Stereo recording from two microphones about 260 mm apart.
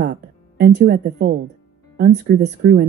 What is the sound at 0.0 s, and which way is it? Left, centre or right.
Speech, right.